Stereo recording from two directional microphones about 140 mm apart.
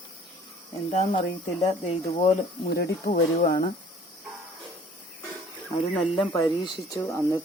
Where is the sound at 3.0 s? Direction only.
90° left.